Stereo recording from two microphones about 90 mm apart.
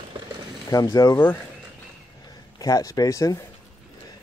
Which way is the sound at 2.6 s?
40° left (ahead or behind).